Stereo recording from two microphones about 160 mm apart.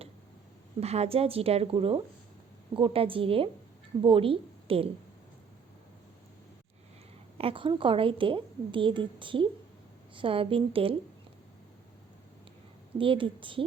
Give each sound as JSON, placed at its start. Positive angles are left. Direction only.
{"t": 0.8, "sound": "a woman's voice", "side_deg": -40}
{"t": 7.3, "sound": "a woman's voice", "side_deg": -35}
{"t": 13.0, "sound": "a woman's voice", "side_deg": -35}